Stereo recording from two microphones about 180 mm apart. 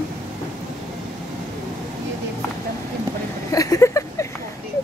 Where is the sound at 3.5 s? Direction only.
20° left (ahead or behind).